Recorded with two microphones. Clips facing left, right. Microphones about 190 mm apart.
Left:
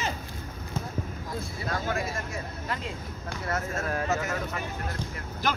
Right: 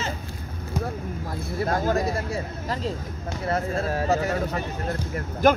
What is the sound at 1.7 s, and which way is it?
Speech, 45° right (ahead or behind).